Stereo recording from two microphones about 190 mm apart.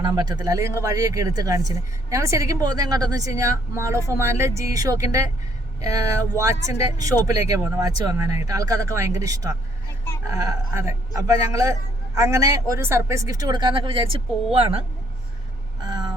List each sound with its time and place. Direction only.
0.0 s speech: 20° right (ahead or behind)
15.8 s vehicle: 20° right (ahead or behind)